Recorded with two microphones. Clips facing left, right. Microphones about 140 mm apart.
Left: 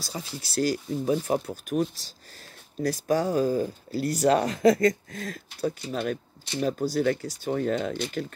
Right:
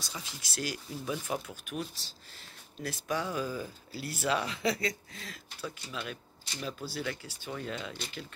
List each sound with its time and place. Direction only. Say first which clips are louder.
0.0 s speech: left 8 dB; 35° left (ahead or behind)